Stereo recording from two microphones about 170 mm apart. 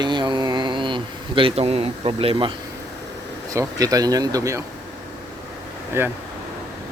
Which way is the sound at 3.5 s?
20° right (ahead or behind).